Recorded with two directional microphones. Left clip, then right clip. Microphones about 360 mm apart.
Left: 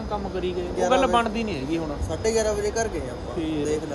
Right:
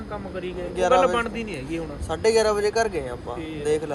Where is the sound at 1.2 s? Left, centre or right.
Centre.